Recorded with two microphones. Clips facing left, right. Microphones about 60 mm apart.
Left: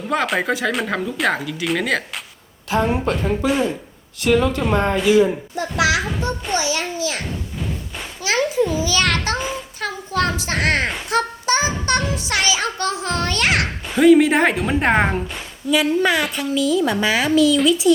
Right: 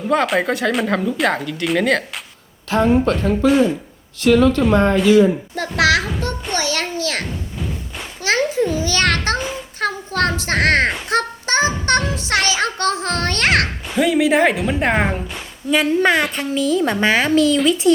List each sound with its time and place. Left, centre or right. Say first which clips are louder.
0.1 s speech: right 3 dB; centre
5.5 s a child's voice: right 2 dB; right
8.2 s a child's voice: right 1 dB; right
13.9 s speech: left 3 dB; centre
15.7 s a child's voice: right 2 dB; right